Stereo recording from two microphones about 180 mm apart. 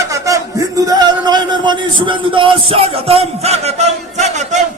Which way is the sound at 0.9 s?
20° right (ahead or behind).